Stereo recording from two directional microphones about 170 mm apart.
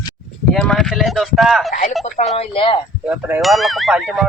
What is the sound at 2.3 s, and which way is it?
Speech, 35° left (ahead or behind).